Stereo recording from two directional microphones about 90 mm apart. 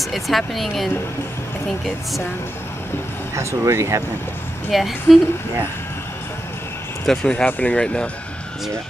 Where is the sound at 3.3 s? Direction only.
35° right (ahead or behind).